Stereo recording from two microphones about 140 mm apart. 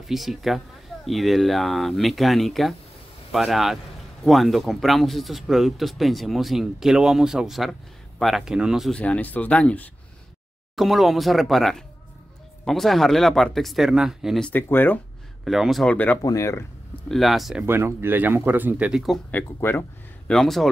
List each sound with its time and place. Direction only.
0.0 s a man's voice: centre (ahead or behind)
9.0 s a man's voice: 10° left (ahead or behind)
14.5 s speech: 15° left (ahead or behind)
15.4 s a man's voice: centre (ahead or behind)
16.2 s speech: 25° left (ahead or behind)
17.1 s a man's voice: centre (ahead or behind)
17.6 s speech: 15° right (ahead or behind)
19.3 s speech: 15° left (ahead or behind)
20.2 s a man's voice: centre (ahead or behind)